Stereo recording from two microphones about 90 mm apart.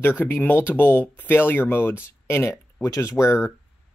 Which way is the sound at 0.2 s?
20° left (ahead or behind).